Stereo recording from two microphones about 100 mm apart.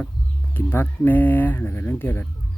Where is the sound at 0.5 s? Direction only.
20° left (ahead or behind).